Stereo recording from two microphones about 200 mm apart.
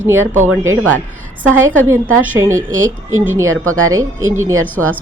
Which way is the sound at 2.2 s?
15° right (ahead or behind).